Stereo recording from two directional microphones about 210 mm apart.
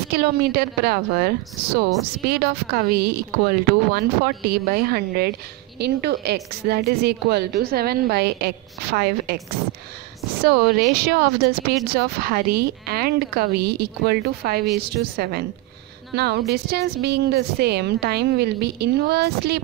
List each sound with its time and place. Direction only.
0.1 s a woman's voice: 50° right (ahead or behind)
11.0 s a woman's voice: 45° right (ahead or behind)